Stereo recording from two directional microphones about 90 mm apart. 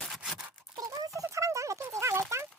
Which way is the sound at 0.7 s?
40° right (ahead or behind).